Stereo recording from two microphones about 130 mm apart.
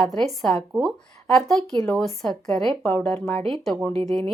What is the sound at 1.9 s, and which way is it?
Speech, 5° left (ahead or behind).